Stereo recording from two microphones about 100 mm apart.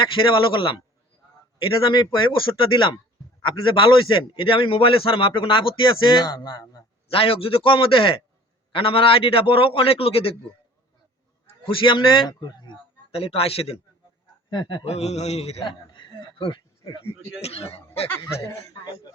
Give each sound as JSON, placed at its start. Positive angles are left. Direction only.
{"t": 0.0, "sound": "a man's voice", "side_deg": 55}
{"t": 1.9, "sound": "speech", "side_deg": 50}
{"t": 3.4, "sound": "a man's voice", "side_deg": 55}
{"t": 7.1, "sound": "a man's voice", "side_deg": 65}
{"t": 11.6, "sound": "a man's voice", "side_deg": 60}
{"t": 12.3, "sound": "speech", "side_deg": 45}
{"t": 13.1, "sound": "a man's voice", "side_deg": 70}
{"t": 14.5, "sound": "speech", "side_deg": 50}
{"t": 14.8, "sound": "speech", "side_deg": 90}
{"t": 15.6, "sound": "speech", "side_deg": 50}
{"t": 17.4, "sound": "speech", "side_deg": 90}
{"t": 18.1, "sound": "speech", "side_deg": 25}